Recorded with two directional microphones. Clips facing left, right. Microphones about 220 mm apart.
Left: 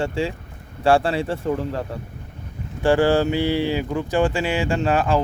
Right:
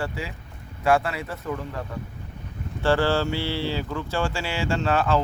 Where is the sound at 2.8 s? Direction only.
15° left (ahead or behind).